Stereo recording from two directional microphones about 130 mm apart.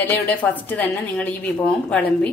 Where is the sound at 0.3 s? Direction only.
10° left (ahead or behind).